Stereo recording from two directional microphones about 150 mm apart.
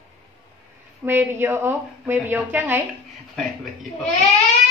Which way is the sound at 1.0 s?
15° right (ahead or behind).